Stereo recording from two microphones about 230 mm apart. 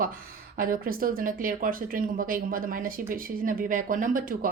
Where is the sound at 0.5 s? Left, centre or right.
Right.